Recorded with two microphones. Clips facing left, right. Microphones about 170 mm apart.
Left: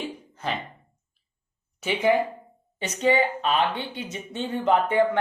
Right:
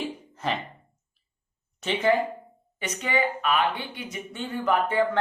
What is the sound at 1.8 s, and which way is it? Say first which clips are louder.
Speech: left 1 dB; 10° left (ahead or behind).